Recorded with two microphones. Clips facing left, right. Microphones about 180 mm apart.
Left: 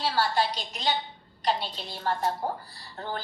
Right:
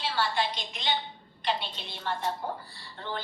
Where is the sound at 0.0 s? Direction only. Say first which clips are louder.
Left 3 dB; 40° left (ahead or behind).